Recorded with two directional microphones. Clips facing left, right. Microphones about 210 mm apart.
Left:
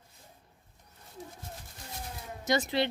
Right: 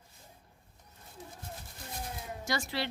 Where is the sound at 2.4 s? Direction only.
20° left (ahead or behind).